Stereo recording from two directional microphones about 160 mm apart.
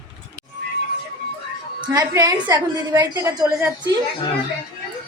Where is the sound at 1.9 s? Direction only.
20° right (ahead or behind).